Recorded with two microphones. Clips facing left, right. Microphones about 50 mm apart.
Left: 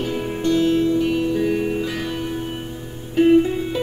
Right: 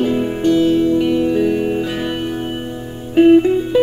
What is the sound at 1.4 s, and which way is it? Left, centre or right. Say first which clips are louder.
Music: right 4 dB; centre.